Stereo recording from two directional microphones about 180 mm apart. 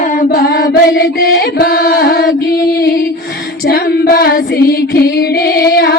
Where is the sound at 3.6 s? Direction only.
55° left (ahead or behind).